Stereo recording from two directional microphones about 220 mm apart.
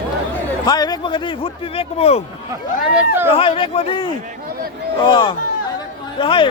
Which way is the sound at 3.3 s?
25° left (ahead or behind).